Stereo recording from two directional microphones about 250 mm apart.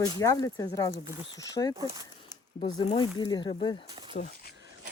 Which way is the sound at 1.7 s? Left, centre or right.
Centre.